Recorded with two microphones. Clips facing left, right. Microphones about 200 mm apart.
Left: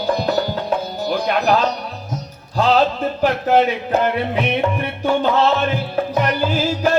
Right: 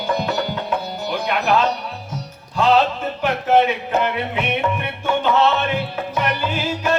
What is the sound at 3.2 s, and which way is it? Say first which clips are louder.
Music: left 1 dB; 35° left (ahead or behind).